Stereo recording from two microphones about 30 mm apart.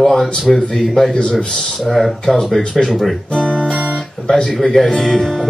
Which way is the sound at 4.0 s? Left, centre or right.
Centre.